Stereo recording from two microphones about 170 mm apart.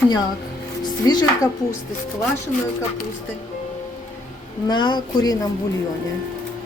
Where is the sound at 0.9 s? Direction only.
25° left (ahead or behind).